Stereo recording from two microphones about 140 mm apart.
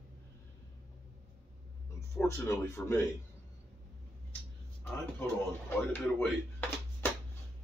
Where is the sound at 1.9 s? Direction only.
20° left (ahead or behind).